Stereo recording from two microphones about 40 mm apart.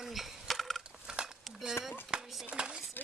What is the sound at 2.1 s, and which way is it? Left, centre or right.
Dishes, right.